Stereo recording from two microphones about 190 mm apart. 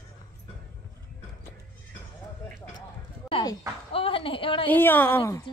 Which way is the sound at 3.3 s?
25° left (ahead or behind).